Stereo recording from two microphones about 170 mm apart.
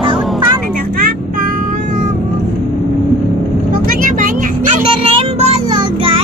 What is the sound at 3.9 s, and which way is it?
Vehicle, 50° right (ahead or behind).